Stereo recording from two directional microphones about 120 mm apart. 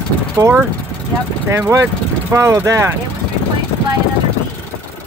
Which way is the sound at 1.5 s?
25° right (ahead or behind).